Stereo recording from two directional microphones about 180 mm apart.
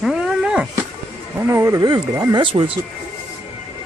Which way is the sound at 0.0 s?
5° right (ahead or behind).